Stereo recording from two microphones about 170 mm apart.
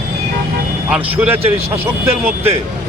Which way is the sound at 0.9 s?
10° right (ahead or behind).